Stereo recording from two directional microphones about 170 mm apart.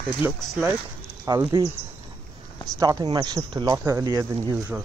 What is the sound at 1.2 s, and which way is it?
Speech, 25° right (ahead or behind).